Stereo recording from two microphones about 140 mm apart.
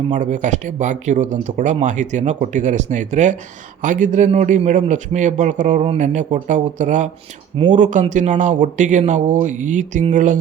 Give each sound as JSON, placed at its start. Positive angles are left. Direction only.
{"t": 0.1, "sound": "speech", "side_deg": -60}